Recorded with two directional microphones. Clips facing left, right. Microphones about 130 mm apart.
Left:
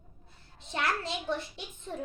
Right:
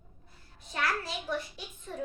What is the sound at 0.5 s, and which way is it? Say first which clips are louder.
Speech: left 1 dB; 25° left (ahead or behind).